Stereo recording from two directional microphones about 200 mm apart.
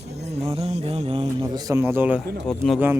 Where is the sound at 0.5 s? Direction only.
30° right (ahead or behind); by 2.2 s 10° right (ahead or behind).